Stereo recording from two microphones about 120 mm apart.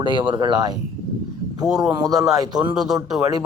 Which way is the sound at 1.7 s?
5° right (ahead or behind).